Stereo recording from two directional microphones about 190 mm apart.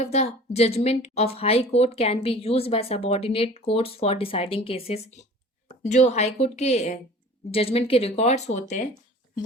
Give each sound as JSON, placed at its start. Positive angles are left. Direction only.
{"t": 0.0, "sound": "speech", "side_deg": 35}